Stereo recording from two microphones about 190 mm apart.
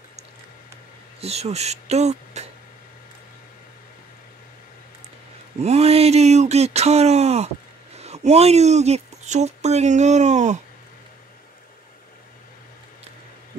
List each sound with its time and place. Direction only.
1.2 s speech: 35° right (ahead or behind)
5.6 s speech: 35° right (ahead or behind)